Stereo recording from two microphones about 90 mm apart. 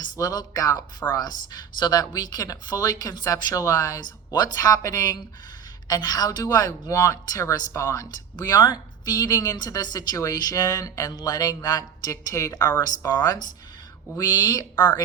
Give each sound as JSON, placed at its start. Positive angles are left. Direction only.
{"t": 0.0, "sound": "a woman's voice", "side_deg": 50}
{"t": 8.5, "sound": "a woman's voice", "side_deg": 50}
{"t": 12.1, "sound": "a woman's voice", "side_deg": 35}